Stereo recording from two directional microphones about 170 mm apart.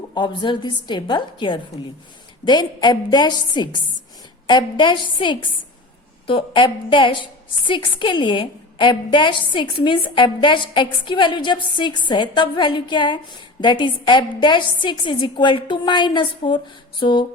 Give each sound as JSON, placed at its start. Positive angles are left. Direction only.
{"t": 0.1, "sound": "a woman's voice", "side_deg": 25}